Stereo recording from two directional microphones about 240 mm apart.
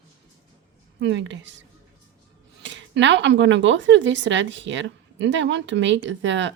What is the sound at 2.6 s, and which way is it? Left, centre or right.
Speech, right.